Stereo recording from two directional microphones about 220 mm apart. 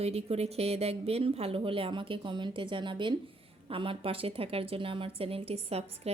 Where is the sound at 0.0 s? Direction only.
25° right (ahead or behind).